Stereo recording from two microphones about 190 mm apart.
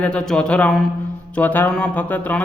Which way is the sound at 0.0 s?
5° left (ahead or behind).